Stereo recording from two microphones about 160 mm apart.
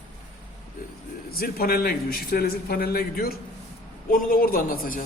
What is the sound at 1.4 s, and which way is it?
A man's voice, 70° left (ahead or behind).